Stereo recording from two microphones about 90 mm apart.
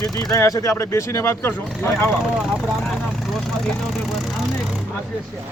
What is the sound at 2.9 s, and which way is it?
Vehicle, 5° left (ahead or behind).